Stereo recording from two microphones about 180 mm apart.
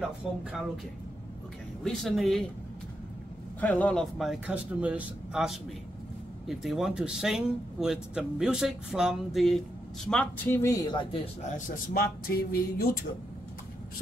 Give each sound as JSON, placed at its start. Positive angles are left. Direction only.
{"t": 0.0, "sound": "speech", "side_deg": -5}
{"t": 1.9, "sound": "speech", "side_deg": 0}
{"t": 3.6, "sound": "speech", "side_deg": 5}
{"t": 11.5, "sound": "speech", "side_deg": 50}